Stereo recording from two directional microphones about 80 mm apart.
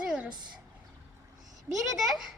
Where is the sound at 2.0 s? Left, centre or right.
Centre.